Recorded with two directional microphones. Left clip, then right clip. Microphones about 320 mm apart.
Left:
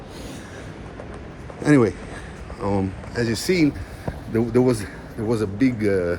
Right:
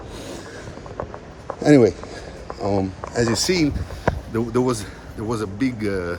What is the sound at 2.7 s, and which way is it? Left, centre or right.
Speech, right.